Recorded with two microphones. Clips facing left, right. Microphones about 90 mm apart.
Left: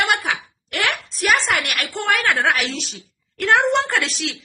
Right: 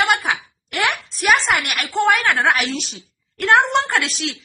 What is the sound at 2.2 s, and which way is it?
Speech, 15° right (ahead or behind).